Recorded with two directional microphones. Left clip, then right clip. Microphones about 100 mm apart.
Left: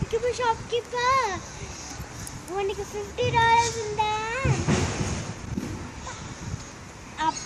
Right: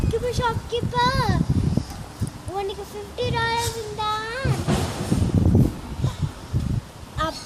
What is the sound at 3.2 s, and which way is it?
A child's voice, 20° right (ahead or behind).